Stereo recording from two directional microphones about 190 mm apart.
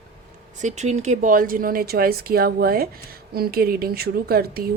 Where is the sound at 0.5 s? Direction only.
40° right (ahead or behind).